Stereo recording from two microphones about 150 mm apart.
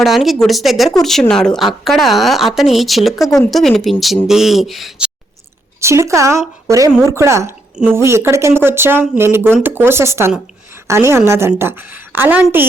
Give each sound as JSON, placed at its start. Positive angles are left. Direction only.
{"t": 0.0, "sound": "a woman's voice", "side_deg": 0}
{"t": 5.8, "sound": "speech", "side_deg": -20}